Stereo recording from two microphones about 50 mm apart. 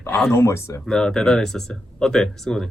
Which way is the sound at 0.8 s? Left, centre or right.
Centre.